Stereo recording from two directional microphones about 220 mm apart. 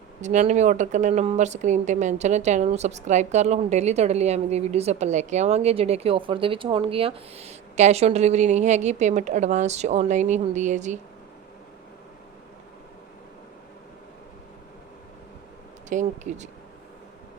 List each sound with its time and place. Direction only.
0.2 s speech: 30° right (ahead or behind)
15.9 s speech: 35° right (ahead or behind)